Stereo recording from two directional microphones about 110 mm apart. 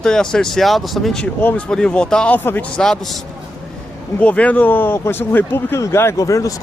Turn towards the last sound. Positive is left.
turn(degrees=30)  # may be behind; listen again after turning